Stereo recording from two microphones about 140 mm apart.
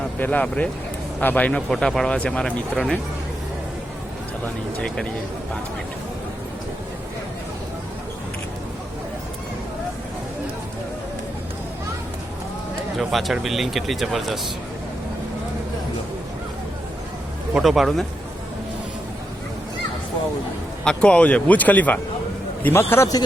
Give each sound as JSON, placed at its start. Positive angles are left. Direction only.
{"t": 0.2, "sound": "speech", "side_deg": 10}
{"t": 13.0, "sound": "speech", "side_deg": 0}
{"t": 17.5, "sound": "speech", "side_deg": 0}
{"t": 20.8, "sound": "speech", "side_deg": 5}